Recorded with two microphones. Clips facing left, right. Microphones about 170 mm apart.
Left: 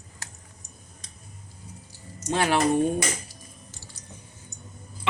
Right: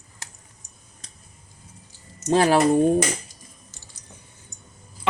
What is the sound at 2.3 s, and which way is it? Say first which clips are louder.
Speech: right 6 dB; 35° right (ahead or behind).